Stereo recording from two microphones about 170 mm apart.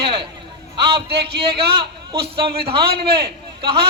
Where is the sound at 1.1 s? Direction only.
70° right (ahead or behind).